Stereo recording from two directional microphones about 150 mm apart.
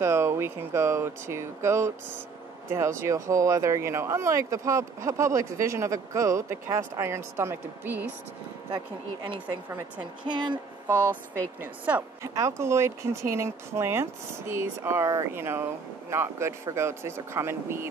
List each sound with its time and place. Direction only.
0.0 s speech: 20° right (ahead or behind)
8.7 s speech: 30° right (ahead or behind)
9.7 s speech: 20° right (ahead or behind)
10.2 s speech: 30° right (ahead or behind)
11.6 s speech: 10° right (ahead or behind)